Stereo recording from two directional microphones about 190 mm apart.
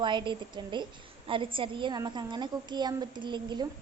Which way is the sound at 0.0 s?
25° right (ahead or behind).